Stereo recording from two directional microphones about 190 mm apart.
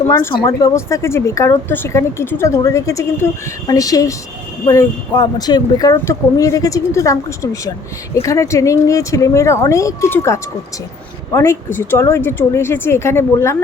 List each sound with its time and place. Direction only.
0.1 s speech: 15° left (ahead or behind)